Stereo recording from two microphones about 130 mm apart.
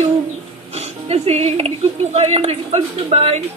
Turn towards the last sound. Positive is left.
turn(degrees=-50)  # may be behind; listen again after turning